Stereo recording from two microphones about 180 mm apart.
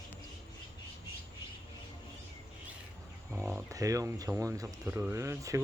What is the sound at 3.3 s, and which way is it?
Speech, 15° right (ahead or behind).